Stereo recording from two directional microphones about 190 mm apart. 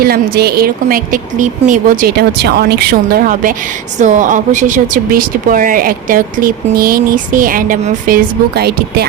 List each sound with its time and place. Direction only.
0.0 s speech: 55° right (ahead or behind)